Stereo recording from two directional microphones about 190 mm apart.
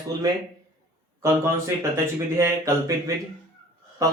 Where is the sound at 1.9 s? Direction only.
15° right (ahead or behind).